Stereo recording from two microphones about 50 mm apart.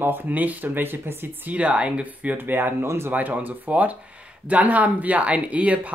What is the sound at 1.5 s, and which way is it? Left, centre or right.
Speech, right.